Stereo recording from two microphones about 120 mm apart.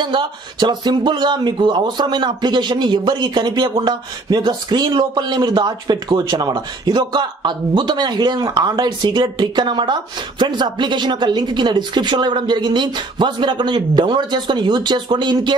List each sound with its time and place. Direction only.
0.0 s speech: 40° right (ahead or behind)